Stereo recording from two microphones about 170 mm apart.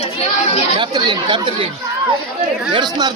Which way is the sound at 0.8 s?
25° right (ahead or behind).